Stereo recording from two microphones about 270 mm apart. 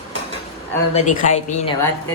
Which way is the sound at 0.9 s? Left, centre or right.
Left.